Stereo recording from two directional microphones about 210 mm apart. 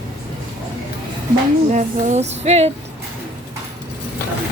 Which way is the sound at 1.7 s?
35° right (ahead or behind).